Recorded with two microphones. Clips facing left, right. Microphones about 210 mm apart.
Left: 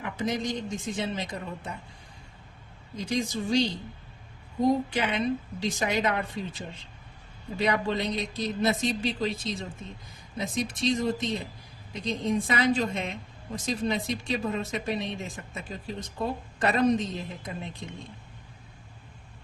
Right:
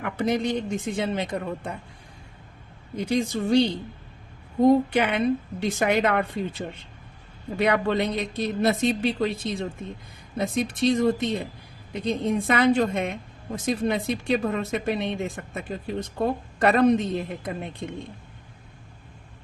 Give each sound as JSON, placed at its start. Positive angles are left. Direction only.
{"t": 0.0, "sound": "a woman's voice", "side_deg": -60}
{"t": 2.9, "sound": "a woman's voice", "side_deg": -55}
{"t": 7.6, "sound": "a woman's voice", "side_deg": -60}